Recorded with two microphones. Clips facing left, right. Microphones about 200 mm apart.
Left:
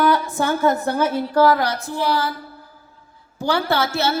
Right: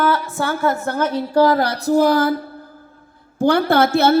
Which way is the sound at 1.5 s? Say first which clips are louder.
Right 5 dB; 30° right (ahead or behind).